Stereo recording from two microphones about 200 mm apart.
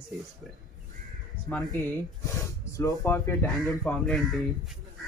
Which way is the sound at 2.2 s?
15° left (ahead or behind).